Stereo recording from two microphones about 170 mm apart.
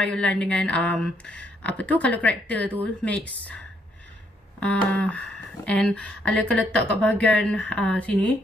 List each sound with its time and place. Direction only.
0.0 s speech: 5° left (ahead or behind)